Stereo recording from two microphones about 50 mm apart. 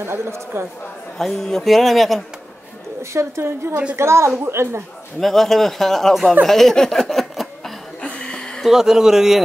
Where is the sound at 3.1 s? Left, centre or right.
Right.